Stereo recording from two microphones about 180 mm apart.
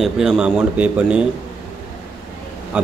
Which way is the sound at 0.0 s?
Centre (ahead or behind).